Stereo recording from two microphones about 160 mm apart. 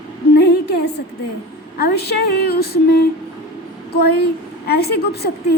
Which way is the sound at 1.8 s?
85° left.